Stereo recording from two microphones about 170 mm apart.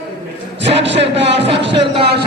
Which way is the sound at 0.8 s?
90° right.